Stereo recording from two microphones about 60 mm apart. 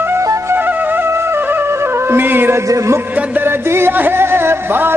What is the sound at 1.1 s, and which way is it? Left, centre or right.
Music, right.